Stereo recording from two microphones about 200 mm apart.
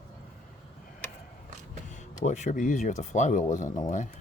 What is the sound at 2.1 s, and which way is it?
Speech, 35° left (ahead or behind).